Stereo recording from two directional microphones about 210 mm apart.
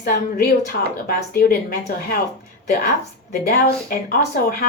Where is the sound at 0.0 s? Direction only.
45° left (ahead or behind).